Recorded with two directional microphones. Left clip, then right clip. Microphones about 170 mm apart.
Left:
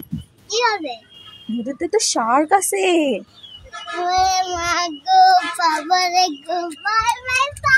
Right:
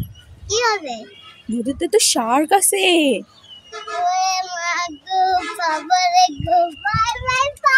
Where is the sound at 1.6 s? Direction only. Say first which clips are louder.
Right 3 dB; 25° right (ahead or behind).